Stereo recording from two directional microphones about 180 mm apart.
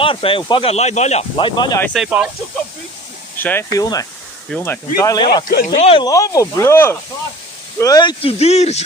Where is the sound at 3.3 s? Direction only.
10° left (ahead or behind).